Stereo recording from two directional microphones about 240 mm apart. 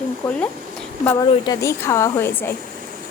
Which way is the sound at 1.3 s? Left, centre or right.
Centre.